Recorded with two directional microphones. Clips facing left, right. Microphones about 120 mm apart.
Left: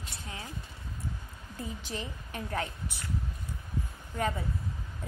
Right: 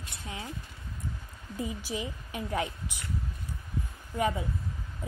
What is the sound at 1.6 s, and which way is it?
A woman's voice, 10° right (ahead or behind).